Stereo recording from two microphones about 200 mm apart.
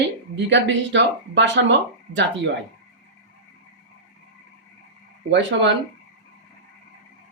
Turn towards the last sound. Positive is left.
turn(degrees=-60)  # may be behind; listen again after turning